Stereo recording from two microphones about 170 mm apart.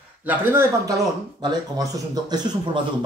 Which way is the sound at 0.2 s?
10° right (ahead or behind).